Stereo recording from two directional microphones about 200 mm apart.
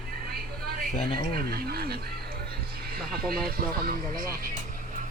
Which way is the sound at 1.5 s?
50° right (ahead or behind).